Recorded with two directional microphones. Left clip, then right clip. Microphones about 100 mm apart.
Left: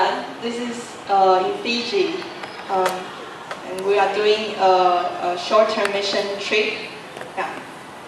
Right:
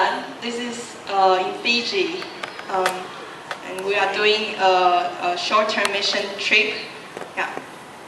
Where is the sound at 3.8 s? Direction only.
20° right (ahead or behind).